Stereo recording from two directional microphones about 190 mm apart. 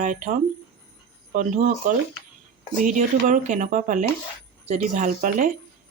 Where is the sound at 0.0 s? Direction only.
40° right (ahead or behind).